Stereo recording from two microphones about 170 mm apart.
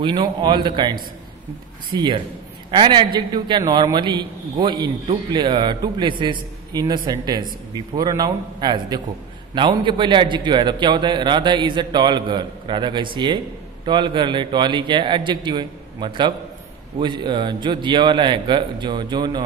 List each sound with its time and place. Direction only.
0.0 s a man's voice: 25° right (ahead or behind)